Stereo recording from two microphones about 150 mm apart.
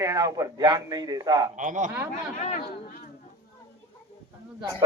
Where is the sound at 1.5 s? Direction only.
55° right (ahead or behind).